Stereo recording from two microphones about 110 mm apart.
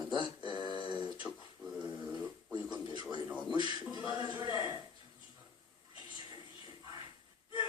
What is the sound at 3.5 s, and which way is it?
Speech, 45° right (ahead or behind).